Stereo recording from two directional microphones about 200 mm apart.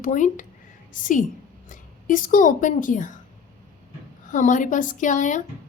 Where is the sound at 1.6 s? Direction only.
40° left (ahead or behind).